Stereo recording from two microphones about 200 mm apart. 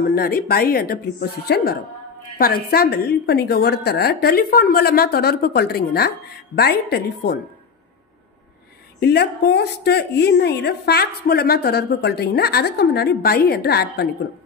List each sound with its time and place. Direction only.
0.0 s a woman's voice: 50° left (ahead or behind)
9.0 s a woman's voice: 55° left (ahead or behind)